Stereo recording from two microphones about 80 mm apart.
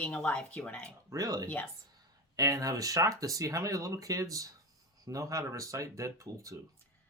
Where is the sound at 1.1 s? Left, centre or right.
Right.